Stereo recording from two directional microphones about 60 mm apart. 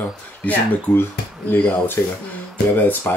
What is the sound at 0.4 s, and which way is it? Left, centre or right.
Speech, left.